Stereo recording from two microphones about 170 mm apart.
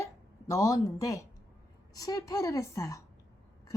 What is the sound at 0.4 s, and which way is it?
A woman's voice, 20° left (ahead or behind).